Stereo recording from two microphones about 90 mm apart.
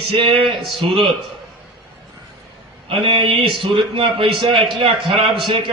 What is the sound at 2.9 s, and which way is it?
A man's voice, 70° right (ahead or behind).